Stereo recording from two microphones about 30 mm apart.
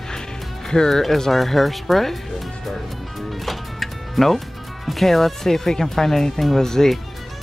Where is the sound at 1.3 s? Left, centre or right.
Centre.